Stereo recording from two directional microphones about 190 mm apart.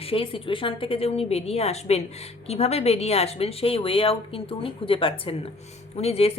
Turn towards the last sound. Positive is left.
turn(degrees=30)  # may be behind; listen again after turning